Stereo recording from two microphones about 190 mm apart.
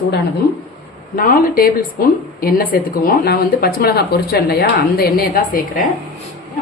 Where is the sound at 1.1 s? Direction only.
50° left (ahead or behind).